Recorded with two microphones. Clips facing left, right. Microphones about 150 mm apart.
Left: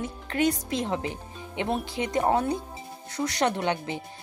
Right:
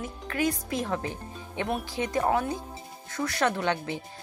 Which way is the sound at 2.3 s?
30° left (ahead or behind).